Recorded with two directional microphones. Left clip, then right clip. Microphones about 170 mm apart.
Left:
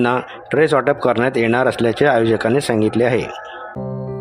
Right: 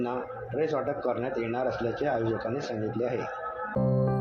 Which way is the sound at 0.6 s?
75° left (ahead or behind).